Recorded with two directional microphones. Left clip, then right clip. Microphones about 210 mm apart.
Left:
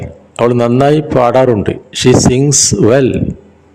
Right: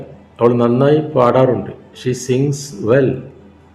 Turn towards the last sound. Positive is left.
turn(degrees=45)  # may be behind; listen again after turning